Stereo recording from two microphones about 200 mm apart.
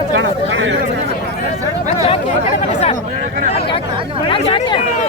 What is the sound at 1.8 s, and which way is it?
Speech, 35° left (ahead or behind).